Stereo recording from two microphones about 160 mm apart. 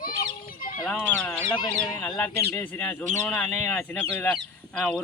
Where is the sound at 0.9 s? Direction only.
5° left (ahead or behind).